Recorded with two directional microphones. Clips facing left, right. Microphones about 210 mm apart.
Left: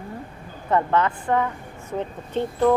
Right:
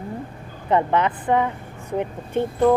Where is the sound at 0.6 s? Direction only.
15° right (ahead or behind).